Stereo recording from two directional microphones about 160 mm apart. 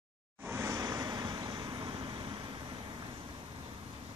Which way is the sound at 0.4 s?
15° right (ahead or behind).